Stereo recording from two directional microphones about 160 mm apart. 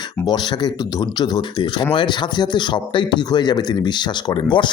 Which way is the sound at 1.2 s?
30° left (ahead or behind).